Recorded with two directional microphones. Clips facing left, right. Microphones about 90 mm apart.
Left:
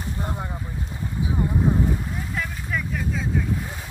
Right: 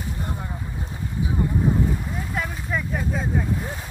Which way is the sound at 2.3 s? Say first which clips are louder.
Right 2 dB; 20° right (ahead or behind).